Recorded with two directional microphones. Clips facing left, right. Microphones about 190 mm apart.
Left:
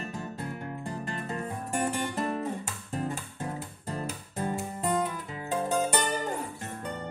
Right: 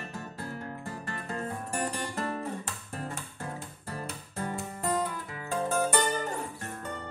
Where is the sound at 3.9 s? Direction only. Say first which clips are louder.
Left 3 dB; 20° left (ahead or behind).